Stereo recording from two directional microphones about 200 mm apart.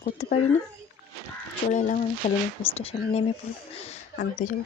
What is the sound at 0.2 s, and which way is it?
Speech, 35° left (ahead or behind).